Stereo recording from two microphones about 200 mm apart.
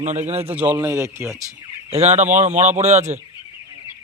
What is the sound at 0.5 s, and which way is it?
Speech, 10° right (ahead or behind).